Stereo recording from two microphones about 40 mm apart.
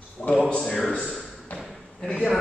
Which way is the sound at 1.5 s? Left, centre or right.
Left.